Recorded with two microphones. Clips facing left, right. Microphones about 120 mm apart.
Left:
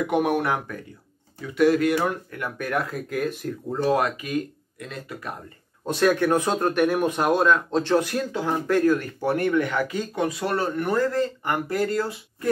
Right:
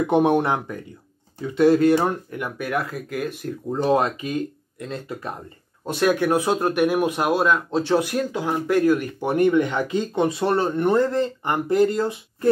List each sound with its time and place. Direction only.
0.0 s speech: 25° right (ahead or behind)
2.3 s speech: 10° right (ahead or behind)
3.7 s speech: 25° right (ahead or behind)
5.9 s speech: 10° right (ahead or behind)